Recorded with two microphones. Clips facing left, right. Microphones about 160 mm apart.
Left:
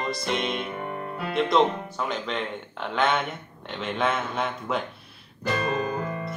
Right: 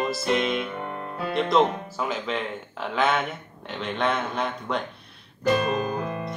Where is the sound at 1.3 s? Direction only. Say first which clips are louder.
Even; centre (ahead or behind).